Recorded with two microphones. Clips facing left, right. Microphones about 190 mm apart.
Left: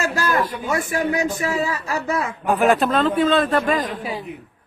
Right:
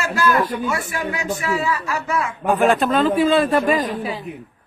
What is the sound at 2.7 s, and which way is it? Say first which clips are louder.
A man's voice: right 1 dB; centre (ahead or behind).